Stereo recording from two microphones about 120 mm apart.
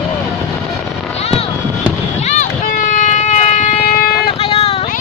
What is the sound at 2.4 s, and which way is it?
Vehicle, 90° left.